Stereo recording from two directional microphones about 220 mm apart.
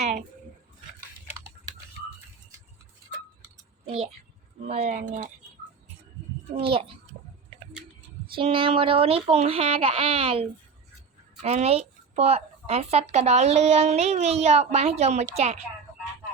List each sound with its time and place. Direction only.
4.7 s speech: 30° right (ahead or behind)
6.6 s speech: 25° right (ahead or behind)
8.4 s speech: 25° right (ahead or behind)
11.4 s speech: 30° right (ahead or behind)